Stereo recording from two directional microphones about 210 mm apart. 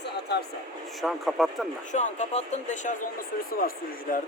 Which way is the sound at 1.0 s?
Centre (ahead or behind).